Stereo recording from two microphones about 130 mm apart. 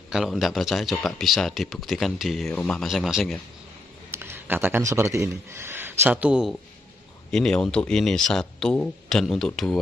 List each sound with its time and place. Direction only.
0.1 s speech: centre (ahead or behind)
4.1 s speech: 20° right (ahead or behind)
7.2 s speech: 5° left (ahead or behind)